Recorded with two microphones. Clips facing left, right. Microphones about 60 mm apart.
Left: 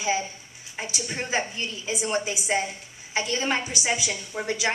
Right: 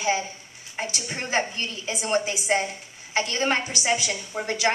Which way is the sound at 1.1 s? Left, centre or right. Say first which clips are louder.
Right 2 dB; right.